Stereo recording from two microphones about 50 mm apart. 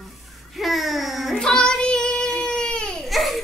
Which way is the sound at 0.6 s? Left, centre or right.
Centre.